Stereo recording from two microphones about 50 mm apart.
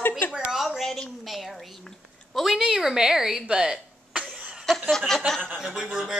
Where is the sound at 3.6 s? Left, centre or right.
Right.